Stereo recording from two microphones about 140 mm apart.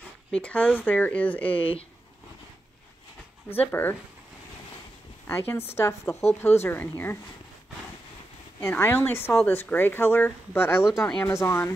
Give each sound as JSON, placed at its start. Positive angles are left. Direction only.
{"t": 0.3, "sound": "speech", "side_deg": 10}
{"t": 1.5, "sound": "speech", "side_deg": 40}
{"t": 3.8, "sound": "speech", "side_deg": 15}
{"t": 5.2, "sound": "speech", "side_deg": 15}
{"t": 8.5, "sound": "speech", "side_deg": 15}